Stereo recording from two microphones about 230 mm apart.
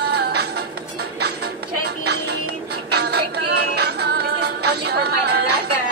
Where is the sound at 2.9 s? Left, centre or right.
Right.